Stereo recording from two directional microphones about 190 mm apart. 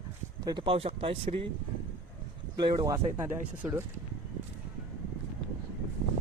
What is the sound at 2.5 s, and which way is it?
Speech, 20° right (ahead or behind).